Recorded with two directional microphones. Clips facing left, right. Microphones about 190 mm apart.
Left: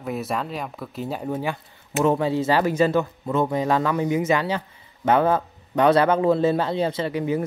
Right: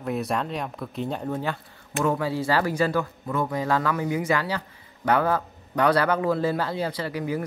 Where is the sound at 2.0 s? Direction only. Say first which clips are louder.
Left 4 dB; 20° left (ahead or behind).